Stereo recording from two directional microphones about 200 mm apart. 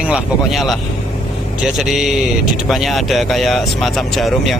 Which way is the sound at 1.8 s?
Centre (ahead or behind).